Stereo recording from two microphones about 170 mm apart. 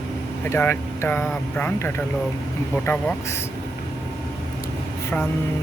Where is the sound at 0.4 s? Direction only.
15° left (ahead or behind).